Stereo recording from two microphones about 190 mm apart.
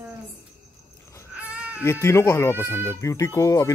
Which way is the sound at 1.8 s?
15° left (ahead or behind).